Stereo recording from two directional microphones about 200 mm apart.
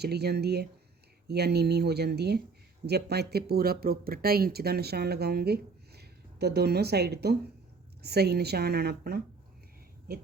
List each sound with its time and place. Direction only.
0.0 s speech: 55° right (ahead or behind)